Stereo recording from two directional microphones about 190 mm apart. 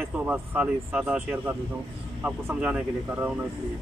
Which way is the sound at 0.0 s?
10° right (ahead or behind).